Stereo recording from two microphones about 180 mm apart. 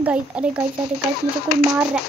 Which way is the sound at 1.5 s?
60° left (ahead or behind).